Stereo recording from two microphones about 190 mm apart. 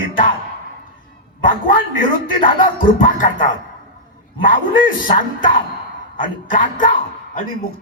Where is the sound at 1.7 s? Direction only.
45° left (ahead or behind).